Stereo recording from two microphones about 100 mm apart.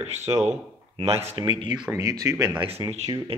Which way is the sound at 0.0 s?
90° right.